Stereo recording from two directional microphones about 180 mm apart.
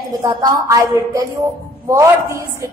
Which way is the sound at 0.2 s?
20° right (ahead or behind).